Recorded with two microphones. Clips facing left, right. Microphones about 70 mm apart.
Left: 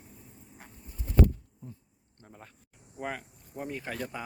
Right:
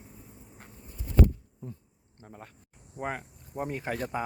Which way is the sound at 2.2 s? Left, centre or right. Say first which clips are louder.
Right 4 dB; centre.